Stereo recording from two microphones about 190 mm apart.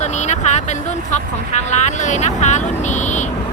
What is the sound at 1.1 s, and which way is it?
Speech, 40° left (ahead or behind).